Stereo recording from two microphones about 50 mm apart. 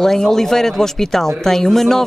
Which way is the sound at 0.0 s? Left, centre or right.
Centre.